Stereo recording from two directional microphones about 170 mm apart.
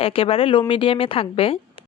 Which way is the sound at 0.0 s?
35° left (ahead or behind).